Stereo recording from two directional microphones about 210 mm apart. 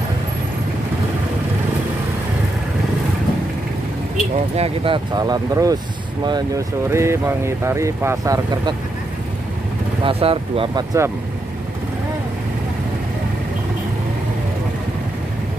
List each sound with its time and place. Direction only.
4.6 s speech: 25° right (ahead or behind)
10.0 s speech: 25° right (ahead or behind)